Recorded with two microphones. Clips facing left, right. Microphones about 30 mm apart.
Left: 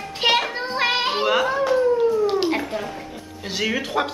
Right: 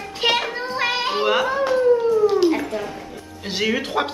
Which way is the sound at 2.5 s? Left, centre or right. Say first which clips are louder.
Right 1 dB; centre.